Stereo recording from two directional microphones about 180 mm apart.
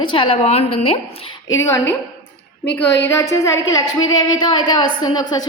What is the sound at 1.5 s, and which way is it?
Speech, 15° left (ahead or behind).